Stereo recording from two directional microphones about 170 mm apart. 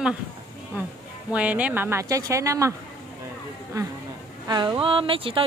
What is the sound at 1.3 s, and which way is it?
A woman's voice, 10° right (ahead or behind).